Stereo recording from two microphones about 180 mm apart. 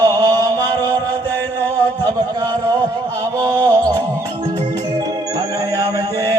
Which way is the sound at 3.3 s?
20° right (ahead or behind).